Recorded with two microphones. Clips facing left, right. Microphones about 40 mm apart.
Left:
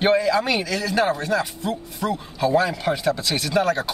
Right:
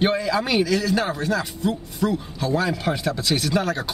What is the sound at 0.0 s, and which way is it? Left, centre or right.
Speech, centre.